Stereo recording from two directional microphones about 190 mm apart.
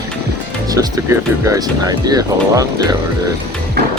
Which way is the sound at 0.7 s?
20° right (ahead or behind).